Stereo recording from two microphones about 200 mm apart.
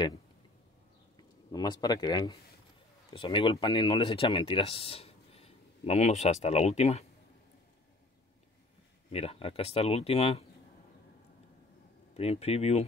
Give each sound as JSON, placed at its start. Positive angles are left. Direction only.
{"t": 1.5, "sound": "speech", "side_deg": 20}
{"t": 9.1, "sound": "speech", "side_deg": 30}
{"t": 12.1, "sound": "speech", "side_deg": 30}